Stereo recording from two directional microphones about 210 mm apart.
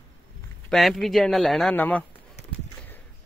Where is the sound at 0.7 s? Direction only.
Centre (ahead or behind).